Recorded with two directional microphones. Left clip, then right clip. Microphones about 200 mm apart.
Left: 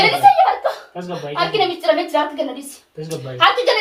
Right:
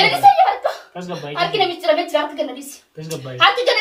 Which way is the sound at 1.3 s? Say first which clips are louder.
Even; 20° right (ahead or behind).